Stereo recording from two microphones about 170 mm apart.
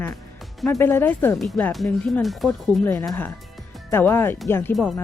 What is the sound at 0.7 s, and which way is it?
Speech, 15° left (ahead or behind).